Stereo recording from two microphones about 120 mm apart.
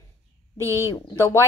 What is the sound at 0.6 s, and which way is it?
Speech, 25° right (ahead or behind).